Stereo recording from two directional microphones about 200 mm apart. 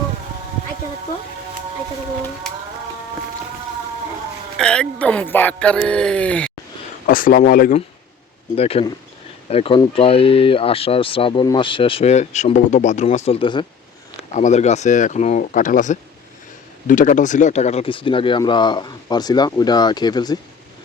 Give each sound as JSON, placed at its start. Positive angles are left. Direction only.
{"t": 4.5, "sound": "speech", "side_deg": 5}
{"t": 7.1, "sound": "speech", "side_deg": 45}
{"t": 8.5, "sound": "speech", "side_deg": 30}
{"t": 14.3, "sound": "speech", "side_deg": 35}